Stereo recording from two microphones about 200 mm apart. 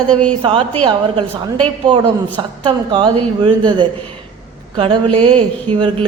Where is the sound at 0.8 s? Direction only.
25° right (ahead or behind).